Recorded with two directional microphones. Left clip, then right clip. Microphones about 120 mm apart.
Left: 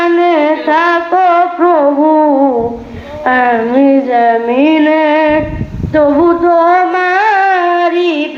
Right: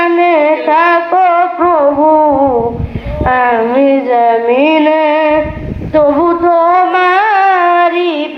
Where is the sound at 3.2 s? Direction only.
50° left (ahead or behind).